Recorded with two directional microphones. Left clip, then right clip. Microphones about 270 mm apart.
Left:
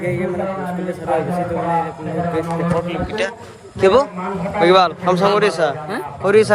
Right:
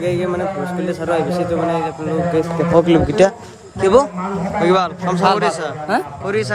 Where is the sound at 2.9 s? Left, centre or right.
Right.